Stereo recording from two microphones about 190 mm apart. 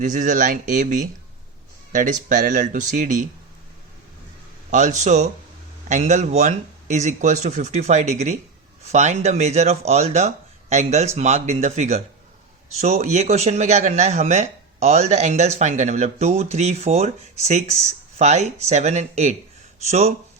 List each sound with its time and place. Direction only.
0.0 s speech: 40° right (ahead or behind)
4.7 s speech: 40° right (ahead or behind)